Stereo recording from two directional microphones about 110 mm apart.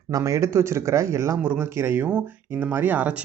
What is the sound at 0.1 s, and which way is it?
Speech, 30° right (ahead or behind).